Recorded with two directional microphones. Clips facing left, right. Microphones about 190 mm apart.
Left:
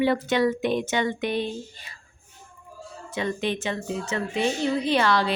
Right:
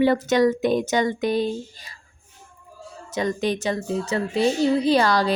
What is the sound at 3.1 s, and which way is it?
Speech, 40° right (ahead or behind).